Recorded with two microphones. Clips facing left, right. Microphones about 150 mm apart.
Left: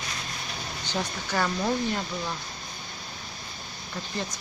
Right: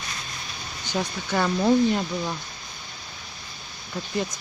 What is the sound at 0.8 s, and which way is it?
Speech, 15° right (ahead or behind).